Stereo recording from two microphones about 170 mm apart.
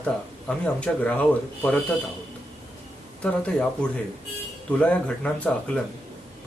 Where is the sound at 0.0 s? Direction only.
5° left (ahead or behind).